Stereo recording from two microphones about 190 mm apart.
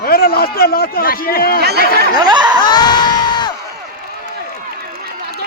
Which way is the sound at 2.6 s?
20° left (ahead or behind).